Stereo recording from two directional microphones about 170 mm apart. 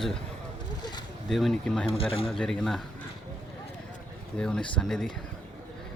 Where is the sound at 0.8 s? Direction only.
25° left (ahead or behind).